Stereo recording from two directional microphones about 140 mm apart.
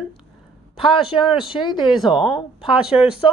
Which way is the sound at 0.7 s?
40° left (ahead or behind).